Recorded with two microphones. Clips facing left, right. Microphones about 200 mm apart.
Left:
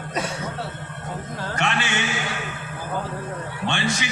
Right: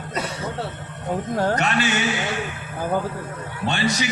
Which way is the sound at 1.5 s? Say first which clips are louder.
Right 3 dB; 40° right (ahead or behind).